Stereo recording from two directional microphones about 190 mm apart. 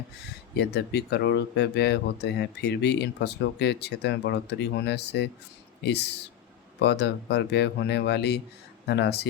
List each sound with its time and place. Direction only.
0.5 s speech: 60° left (ahead or behind)